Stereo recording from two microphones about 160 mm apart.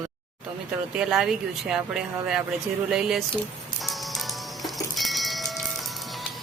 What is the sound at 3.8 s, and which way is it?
Music, centre (ahead or behind).